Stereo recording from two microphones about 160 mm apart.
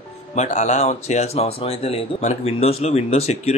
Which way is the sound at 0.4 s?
45° left (ahead or behind).